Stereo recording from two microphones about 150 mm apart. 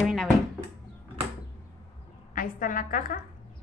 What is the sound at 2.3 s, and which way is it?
Speech, 65° left (ahead or behind).